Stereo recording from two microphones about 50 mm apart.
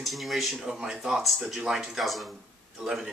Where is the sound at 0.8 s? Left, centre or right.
Centre.